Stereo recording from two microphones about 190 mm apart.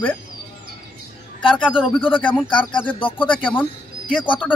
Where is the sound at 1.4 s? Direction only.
25° left (ahead or behind).